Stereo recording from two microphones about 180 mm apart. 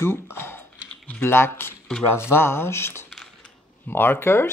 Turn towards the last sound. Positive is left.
turn(degrees=15)  # may be behind; listen again after turning